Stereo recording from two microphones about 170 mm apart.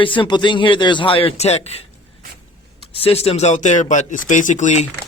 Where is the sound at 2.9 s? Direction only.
35° left (ahead or behind).